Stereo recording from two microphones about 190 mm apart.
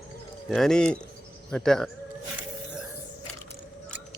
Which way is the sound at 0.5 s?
Centre (ahead or behind).